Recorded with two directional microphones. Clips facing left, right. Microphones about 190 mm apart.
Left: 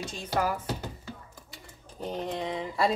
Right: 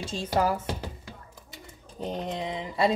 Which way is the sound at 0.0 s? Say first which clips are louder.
Right 3 dB; 30° right (ahead or behind).